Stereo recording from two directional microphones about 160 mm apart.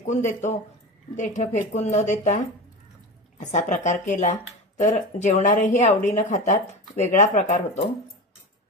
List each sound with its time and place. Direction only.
0.0 s speech: 50° left (ahead or behind)